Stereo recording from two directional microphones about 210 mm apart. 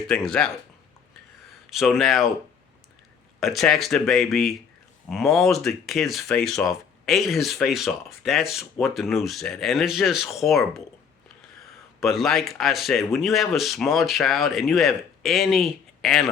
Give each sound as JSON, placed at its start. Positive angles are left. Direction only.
{"t": 0.1, "sound": "speech", "side_deg": 5}
{"t": 1.7, "sound": "speech", "side_deg": 0}
{"t": 3.4, "sound": "speech", "side_deg": 0}
{"t": 11.9, "sound": "speech", "side_deg": 0}